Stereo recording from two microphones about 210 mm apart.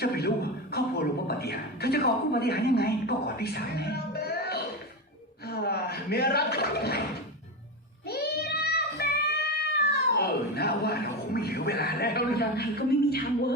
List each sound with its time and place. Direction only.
0.0 s a man's voice: 50° left (ahead or behind)
8.0 s music: 50° left (ahead or behind)
10.1 s speech: 50° left (ahead or behind)